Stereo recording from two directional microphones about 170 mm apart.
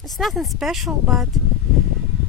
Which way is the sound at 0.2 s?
Centre (ahead or behind).